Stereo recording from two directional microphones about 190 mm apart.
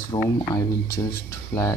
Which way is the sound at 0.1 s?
25° left (ahead or behind).